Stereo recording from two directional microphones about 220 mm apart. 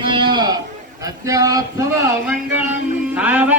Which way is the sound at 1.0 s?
15° right (ahead or behind).